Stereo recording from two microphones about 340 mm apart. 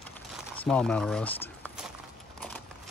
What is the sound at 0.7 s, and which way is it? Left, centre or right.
Speech, centre.